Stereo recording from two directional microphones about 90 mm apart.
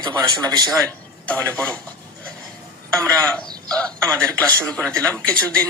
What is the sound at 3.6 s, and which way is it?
A man's voice, 15° left (ahead or behind).